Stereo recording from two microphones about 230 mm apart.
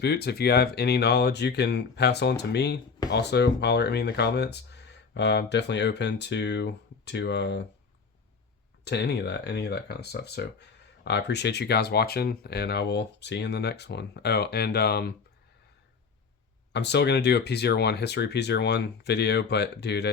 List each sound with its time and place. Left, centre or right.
0.0 s speech: left
8.8 s speech: left
16.7 s speech: left